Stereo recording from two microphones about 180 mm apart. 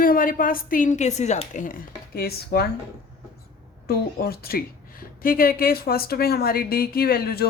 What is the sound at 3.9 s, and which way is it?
A woman's voice, 60° left (ahead or behind).